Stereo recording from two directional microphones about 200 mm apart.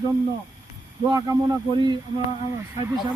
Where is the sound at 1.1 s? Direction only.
20° right (ahead or behind).